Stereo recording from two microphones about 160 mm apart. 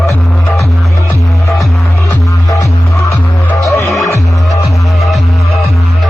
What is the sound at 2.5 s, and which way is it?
Music, 20° left (ahead or behind).